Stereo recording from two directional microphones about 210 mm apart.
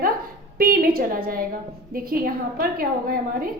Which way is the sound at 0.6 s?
45° right (ahead or behind).